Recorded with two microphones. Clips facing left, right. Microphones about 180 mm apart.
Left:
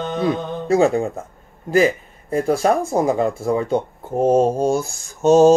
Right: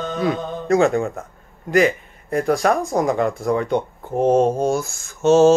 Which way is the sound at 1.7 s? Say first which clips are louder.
Left 1 dB; 30° left (ahead or behind).